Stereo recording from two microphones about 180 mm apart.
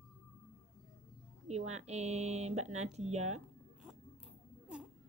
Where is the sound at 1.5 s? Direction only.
40° right (ahead or behind).